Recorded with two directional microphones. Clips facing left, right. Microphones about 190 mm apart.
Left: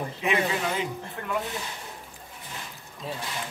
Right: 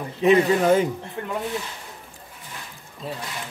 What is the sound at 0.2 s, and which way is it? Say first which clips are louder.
Speech: right 10 dB; 40° right (ahead or behind).